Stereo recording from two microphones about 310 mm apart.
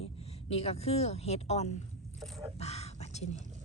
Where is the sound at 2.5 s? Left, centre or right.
Left.